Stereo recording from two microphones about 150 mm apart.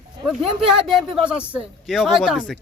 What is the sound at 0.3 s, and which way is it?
Speech, 5° right (ahead or behind).